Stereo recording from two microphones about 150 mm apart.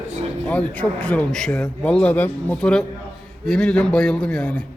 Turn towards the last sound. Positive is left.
turn(degrees=5)  # may be behind; listen again after turning